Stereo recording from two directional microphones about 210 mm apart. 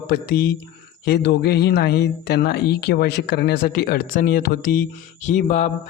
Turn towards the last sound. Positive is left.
turn(degrees=35)  # may be behind; listen again after turning